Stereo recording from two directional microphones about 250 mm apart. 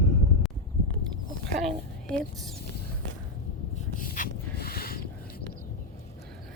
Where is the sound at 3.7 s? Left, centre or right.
Left.